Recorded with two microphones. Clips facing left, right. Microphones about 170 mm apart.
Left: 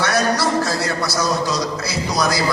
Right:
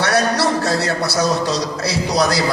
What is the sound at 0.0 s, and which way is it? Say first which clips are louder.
A man's voice: right 2 dB; 70° right (ahead or behind).